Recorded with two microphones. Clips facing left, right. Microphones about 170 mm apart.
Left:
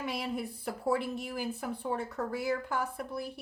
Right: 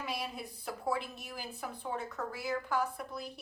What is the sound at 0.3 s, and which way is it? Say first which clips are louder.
A woman's voice: left 6 dB; 55° left (ahead or behind).